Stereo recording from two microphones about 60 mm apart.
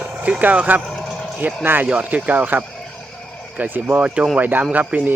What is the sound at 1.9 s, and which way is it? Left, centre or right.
Speech, right.